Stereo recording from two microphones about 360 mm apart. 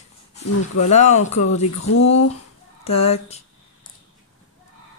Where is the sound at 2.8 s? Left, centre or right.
Centre.